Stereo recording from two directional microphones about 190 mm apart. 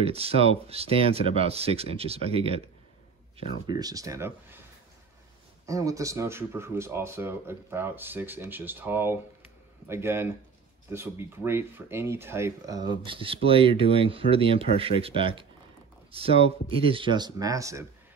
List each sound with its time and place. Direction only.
0.0 s speech: 30° right (ahead or behind); by 4.6 s 15° right (ahead or behind)
5.7 s speech: 15° right (ahead or behind)